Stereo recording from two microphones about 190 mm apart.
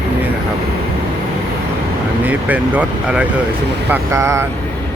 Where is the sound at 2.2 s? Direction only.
10° right (ahead or behind).